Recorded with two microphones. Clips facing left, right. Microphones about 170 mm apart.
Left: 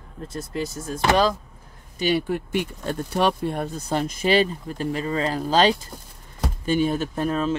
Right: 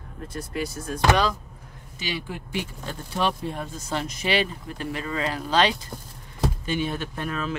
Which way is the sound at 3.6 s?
45° left (ahead or behind).